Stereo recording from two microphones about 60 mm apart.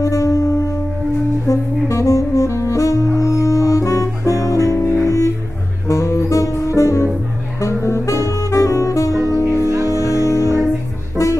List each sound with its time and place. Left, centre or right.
0.0 s music: left
1.5 s saxophone: left
5.0 s music: left